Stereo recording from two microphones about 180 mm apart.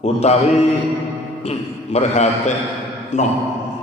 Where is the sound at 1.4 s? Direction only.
35° left (ahead or behind).